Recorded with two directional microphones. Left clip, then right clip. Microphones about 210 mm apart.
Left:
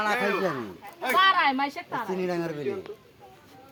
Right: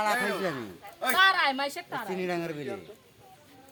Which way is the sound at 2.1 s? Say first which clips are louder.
Left 1 dB; 10° left (ahead or behind).